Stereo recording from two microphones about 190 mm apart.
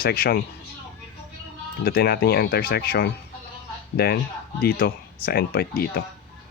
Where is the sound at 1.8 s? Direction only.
55° left (ahead or behind).